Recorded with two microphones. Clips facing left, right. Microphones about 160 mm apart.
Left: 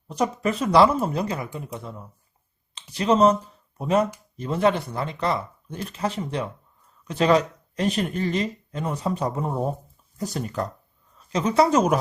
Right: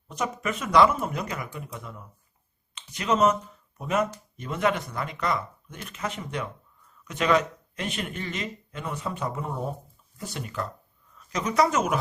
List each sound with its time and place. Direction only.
0.1 s speech: 35° left (ahead or behind)